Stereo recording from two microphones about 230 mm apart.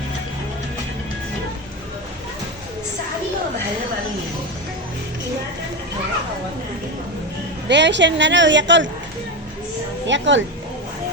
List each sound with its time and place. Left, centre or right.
7.7 s a woman's voice: right
10.1 s a woman's voice: right